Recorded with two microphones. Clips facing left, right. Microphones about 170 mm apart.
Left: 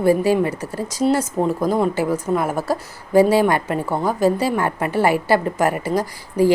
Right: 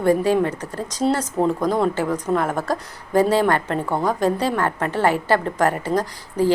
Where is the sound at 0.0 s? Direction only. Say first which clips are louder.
Left 1 dB; 10° left (ahead or behind).